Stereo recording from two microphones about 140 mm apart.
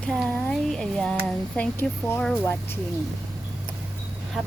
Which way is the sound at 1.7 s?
15° left (ahead or behind).